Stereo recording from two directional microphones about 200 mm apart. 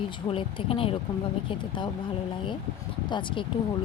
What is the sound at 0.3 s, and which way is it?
Speech, 25° left (ahead or behind).